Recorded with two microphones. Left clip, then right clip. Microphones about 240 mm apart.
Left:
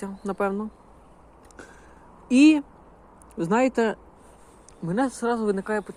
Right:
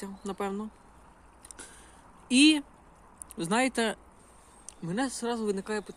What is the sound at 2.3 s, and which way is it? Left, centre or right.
Speech, centre.